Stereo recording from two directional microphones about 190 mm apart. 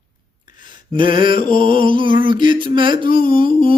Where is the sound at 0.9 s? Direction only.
25° right (ahead or behind).